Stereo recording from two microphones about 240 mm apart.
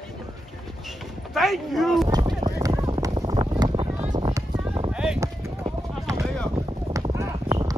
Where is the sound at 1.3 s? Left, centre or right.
Centre.